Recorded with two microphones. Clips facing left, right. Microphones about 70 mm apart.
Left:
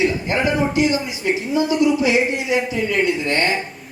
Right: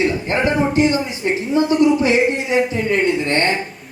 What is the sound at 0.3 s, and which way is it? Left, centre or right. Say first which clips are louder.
Speech: right 2 dB; right.